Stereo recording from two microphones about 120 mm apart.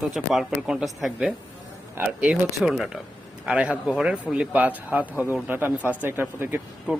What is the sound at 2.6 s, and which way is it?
A man's voice, 5° right (ahead or behind).